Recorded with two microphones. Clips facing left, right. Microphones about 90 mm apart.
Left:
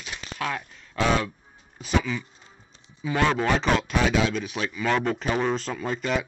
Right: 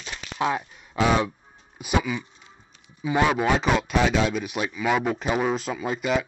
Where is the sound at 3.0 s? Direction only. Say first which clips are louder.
Right 2 dB; 15° right (ahead or behind).